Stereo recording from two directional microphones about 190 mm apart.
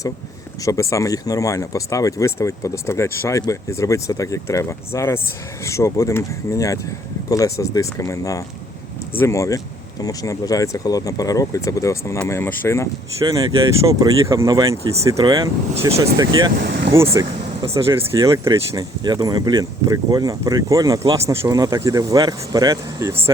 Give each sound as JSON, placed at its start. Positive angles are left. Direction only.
{"t": 0.6, "sound": "speech", "side_deg": 15}
{"t": 13.2, "sound": "speech", "side_deg": -20}
{"t": 16.6, "sound": "speech", "side_deg": -60}
{"t": 16.9, "sound": "speech", "side_deg": -15}